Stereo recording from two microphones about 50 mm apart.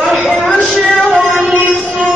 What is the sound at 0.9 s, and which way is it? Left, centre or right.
Music, centre.